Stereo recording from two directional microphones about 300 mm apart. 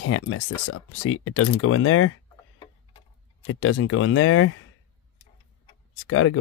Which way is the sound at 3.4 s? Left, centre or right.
Left.